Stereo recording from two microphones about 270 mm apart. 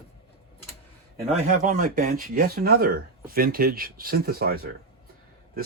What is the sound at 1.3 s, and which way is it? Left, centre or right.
Speech, right.